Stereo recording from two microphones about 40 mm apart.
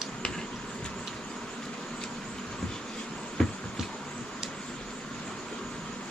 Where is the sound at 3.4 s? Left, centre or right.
Centre.